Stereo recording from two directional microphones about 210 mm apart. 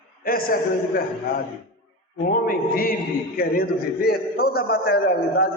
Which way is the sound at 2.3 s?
40° left (ahead or behind).